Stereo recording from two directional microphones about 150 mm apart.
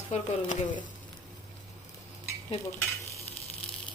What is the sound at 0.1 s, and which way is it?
Speech, 45° left (ahead or behind).